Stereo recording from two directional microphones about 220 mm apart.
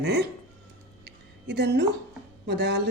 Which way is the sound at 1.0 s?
50° right (ahead or behind).